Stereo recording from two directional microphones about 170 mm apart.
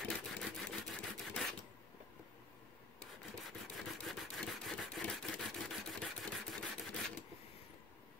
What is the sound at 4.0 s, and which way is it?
Rub, centre (ahead or behind).